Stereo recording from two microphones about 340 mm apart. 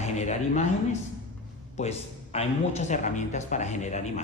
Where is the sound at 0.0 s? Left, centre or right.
Centre.